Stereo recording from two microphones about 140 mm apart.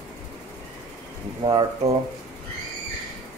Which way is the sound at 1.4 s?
30° right (ahead or behind).